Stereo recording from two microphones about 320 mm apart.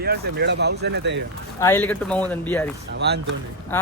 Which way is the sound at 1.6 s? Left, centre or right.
Centre.